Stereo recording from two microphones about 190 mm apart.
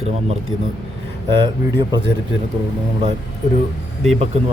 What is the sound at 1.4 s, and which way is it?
Speech, 25° right (ahead or behind).